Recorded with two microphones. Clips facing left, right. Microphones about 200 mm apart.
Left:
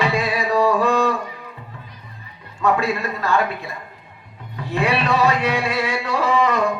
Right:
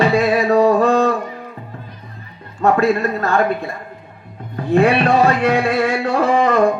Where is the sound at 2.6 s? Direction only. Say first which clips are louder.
Right 5 dB; 50° right (ahead or behind).